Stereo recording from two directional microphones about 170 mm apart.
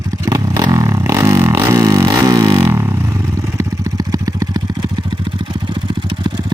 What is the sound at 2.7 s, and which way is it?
Vehicle, 15° right (ahead or behind).